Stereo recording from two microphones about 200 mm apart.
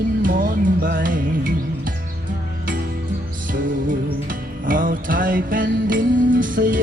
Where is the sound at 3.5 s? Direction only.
45° right (ahead or behind).